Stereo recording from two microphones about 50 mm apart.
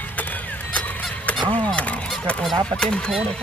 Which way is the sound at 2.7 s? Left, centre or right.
Centre.